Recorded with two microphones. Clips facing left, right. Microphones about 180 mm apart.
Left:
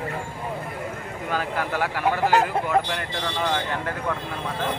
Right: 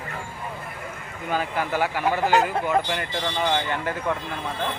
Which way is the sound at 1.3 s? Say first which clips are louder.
Right 1 dB; centre (ahead or behind).